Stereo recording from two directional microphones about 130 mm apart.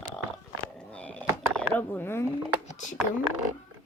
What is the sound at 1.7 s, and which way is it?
Speech, 15° left (ahead or behind).